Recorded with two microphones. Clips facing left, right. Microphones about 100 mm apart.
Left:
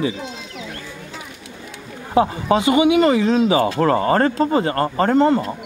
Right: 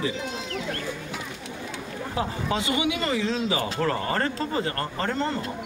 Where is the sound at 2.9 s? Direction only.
60° left (ahead or behind).